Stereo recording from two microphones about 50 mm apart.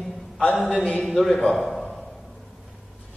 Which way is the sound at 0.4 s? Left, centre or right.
Left.